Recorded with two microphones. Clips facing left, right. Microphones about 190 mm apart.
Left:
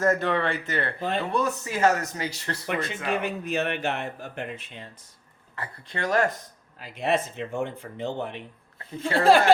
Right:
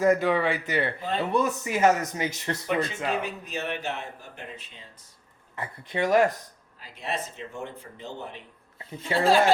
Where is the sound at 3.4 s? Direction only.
60° left (ahead or behind).